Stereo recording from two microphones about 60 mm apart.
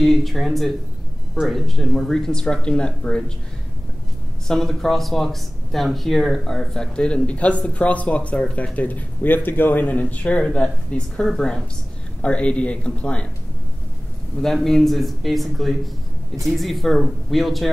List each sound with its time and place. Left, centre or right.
0.0 s speech: centre
4.5 s speech: centre
14.4 s speech: centre